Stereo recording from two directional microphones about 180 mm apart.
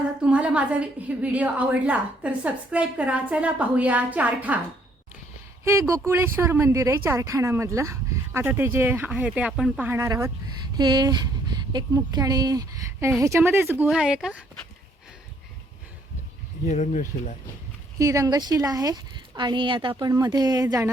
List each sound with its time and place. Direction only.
0.2 s a woman's voice: 5° right (ahead or behind)
6.1 s a woman's voice: 10° right (ahead or behind)
16.6 s speech: 40° left (ahead or behind)
18.0 s speech: 20° right (ahead or behind)